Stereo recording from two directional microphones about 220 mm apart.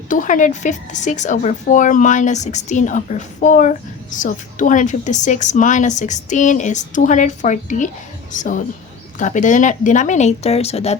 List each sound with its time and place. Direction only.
0.1 s speech: 35° left (ahead or behind)